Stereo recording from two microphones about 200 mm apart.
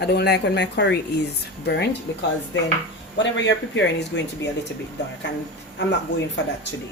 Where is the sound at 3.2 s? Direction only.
65° left (ahead or behind).